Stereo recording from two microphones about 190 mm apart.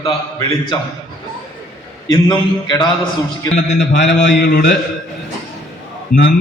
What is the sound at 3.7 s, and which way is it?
Speech, 65° left (ahead or behind).